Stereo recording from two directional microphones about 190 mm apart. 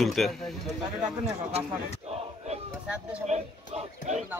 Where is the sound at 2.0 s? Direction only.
35° right (ahead or behind).